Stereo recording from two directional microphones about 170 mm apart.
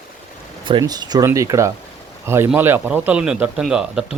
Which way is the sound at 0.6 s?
25° right (ahead or behind).